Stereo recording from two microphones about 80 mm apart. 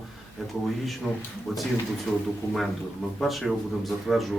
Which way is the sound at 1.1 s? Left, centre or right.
Centre.